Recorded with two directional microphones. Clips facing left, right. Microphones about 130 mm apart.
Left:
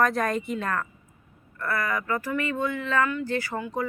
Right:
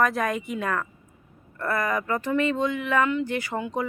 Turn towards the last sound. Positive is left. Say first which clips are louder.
# right 1 dB
turn(degrees=-20)  # may be behind; listen again after turning